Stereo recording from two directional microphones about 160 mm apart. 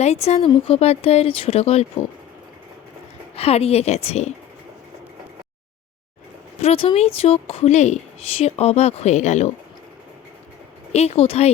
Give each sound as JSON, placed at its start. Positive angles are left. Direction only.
{"t": 0.0, "sound": "a woman's voice", "side_deg": 40}
{"t": 3.3, "sound": "a woman's voice", "side_deg": 40}
{"t": 6.6, "sound": "a woman's voice", "side_deg": 40}
{"t": 10.9, "sound": "a woman's voice", "side_deg": 40}